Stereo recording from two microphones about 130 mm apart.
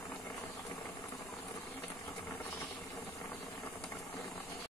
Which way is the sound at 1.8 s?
25° left (ahead or behind).